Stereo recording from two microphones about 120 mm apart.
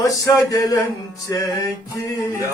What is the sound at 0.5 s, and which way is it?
Male singing, 30° left (ahead or behind).